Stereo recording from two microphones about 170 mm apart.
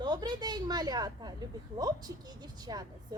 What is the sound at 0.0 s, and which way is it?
A woman's voice, 25° right (ahead or behind).